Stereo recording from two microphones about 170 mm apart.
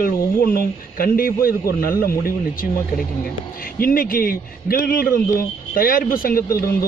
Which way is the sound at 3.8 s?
60° left (ahead or behind).